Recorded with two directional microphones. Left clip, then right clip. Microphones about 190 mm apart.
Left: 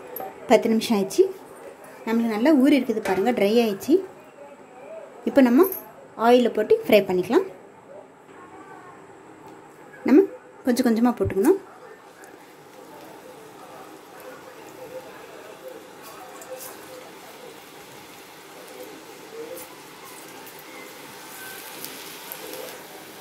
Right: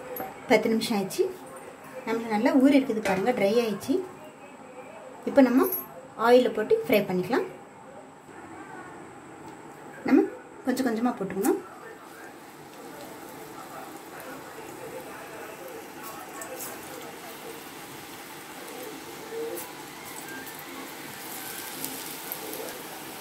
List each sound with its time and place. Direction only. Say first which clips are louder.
0.5 s a woman's voice: left 4 dB; 30° left (ahead or behind)
2.0 s a woman's voice: left 5 dB; 45° left (ahead or behind)
5.3 s a woman's voice: left 3 dB; 35° left (ahead or behind)
10.0 s a sound: left 5 dB; 35° left (ahead or behind)